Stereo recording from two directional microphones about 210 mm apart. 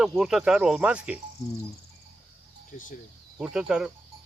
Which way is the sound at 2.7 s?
40° left (ahead or behind).